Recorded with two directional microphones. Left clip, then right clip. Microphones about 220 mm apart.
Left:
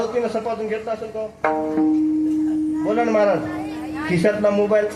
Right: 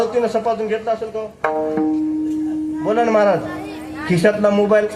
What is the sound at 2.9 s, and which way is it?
A man's voice, 30° right (ahead or behind).